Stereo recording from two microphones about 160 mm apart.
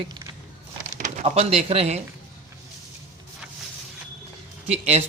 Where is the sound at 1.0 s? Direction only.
45° right (ahead or behind).